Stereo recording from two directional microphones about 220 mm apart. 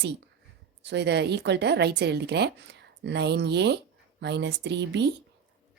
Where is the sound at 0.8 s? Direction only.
50° right (ahead or behind).